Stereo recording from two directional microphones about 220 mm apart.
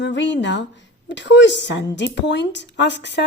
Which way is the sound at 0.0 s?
55° left (ahead or behind).